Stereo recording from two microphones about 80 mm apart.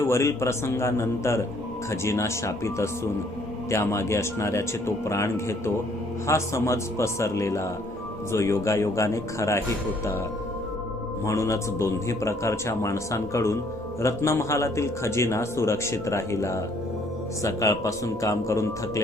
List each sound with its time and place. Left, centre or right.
0.0 s speech: left
11.3 s speech: left